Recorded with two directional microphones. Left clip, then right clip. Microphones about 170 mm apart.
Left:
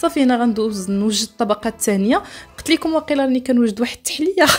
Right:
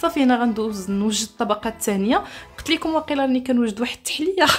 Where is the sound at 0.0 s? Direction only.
25° left (ahead or behind).